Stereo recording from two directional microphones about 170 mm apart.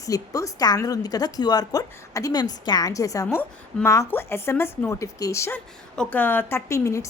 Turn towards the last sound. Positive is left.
turn(degrees=15)  # may be behind; listen again after turning